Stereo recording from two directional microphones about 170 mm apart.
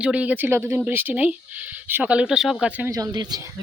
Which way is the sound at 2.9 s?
20° right (ahead or behind).